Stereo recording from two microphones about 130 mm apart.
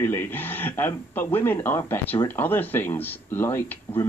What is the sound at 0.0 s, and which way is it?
Speech, 15° left (ahead or behind).